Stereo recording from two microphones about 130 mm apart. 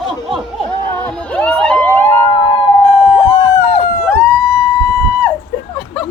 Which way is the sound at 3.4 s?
35° left (ahead or behind).